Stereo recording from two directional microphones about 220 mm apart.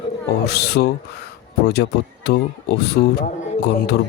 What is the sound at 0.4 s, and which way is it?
Speech, 45° left (ahead or behind).